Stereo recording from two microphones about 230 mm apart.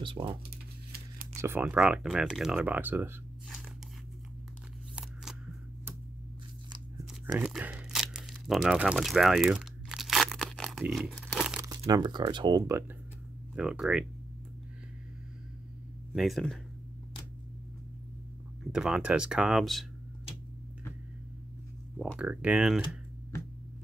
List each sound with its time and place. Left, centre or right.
0.0 s speech: right
0.9 s a sound: right
1.4 s speech: centre
7.3 s a sound: centre
11.8 s speech: centre
13.6 s speech: centre
16.1 s speech: centre
18.6 s speech: centre
21.9 s speech: centre